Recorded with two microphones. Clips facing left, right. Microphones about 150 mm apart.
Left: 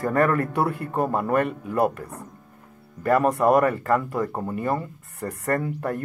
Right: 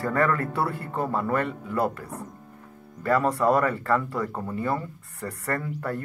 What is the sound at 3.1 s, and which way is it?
Speech, 20° left (ahead or behind).